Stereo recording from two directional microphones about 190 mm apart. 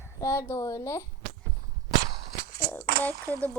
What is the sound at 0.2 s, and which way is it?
Speech, 15° left (ahead or behind).